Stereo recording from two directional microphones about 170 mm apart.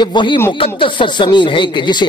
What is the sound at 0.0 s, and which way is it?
Speech, 25° left (ahead or behind).